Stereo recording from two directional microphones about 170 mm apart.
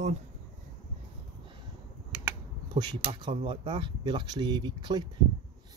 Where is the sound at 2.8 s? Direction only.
25° right (ahead or behind).